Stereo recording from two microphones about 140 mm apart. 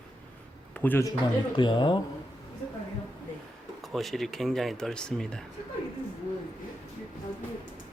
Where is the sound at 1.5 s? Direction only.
35° left (ahead or behind).